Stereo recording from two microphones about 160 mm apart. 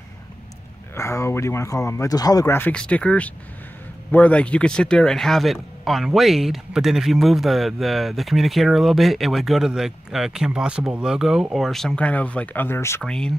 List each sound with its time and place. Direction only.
0.9 s speech: 15° left (ahead or behind)